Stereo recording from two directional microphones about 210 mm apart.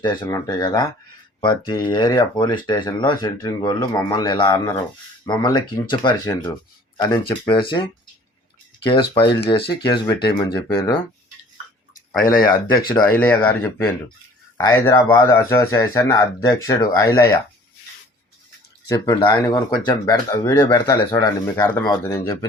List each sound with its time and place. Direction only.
0.0 s speech: 20° left (ahead or behind)
4.5 s speech: 10° left (ahead or behind)
5.2 s speech: 20° left (ahead or behind)
8.9 s speech: 25° left (ahead or behind)
11.9 s speech: 40° left (ahead or behind)
13.1 s speech: 5° left (ahead or behind)
18.9 s speech: 20° left (ahead or behind)